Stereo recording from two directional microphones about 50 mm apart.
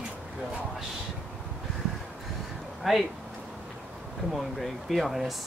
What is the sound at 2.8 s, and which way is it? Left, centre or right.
Speech, centre.